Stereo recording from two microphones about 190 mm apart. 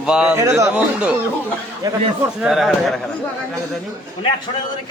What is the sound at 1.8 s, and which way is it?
Speech, 20° right (ahead or behind).